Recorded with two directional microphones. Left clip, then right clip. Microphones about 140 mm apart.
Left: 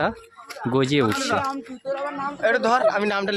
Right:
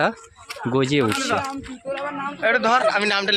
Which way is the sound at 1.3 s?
15° right (ahead or behind).